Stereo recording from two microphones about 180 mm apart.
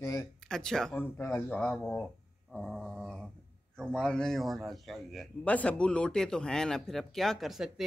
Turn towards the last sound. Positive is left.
turn(degrees=0)  # may be behind; listen again after turning